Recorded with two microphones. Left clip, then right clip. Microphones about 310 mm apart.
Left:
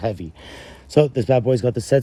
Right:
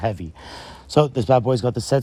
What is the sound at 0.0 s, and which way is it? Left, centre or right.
Speech, right.